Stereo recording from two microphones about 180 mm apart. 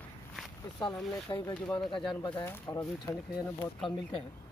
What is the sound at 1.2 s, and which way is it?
Speech, 25° left (ahead or behind).